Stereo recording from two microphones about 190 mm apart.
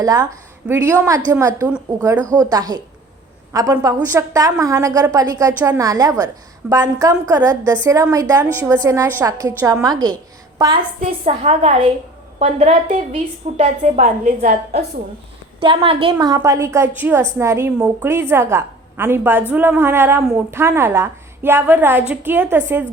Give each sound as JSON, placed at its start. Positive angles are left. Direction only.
{"t": 0.0, "sound": "a woman's voice", "side_deg": -20}
{"t": 11.0, "sound": "a woman's voice", "side_deg": -35}
{"t": 15.6, "sound": "a woman's voice", "side_deg": -25}